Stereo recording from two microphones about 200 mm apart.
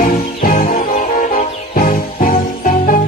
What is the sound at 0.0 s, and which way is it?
Music, 45° left (ahead or behind).